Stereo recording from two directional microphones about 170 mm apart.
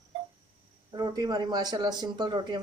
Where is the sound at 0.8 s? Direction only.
20° right (ahead or behind).